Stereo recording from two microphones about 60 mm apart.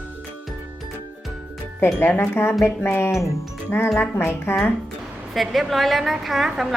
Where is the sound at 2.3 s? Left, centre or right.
Left.